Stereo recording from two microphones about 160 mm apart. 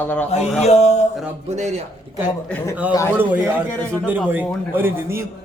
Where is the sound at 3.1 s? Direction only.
10° right (ahead or behind).